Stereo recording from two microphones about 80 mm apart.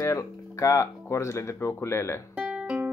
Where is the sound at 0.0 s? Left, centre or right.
Left.